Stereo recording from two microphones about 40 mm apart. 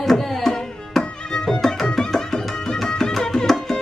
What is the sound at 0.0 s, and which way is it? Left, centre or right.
Tabla, centre.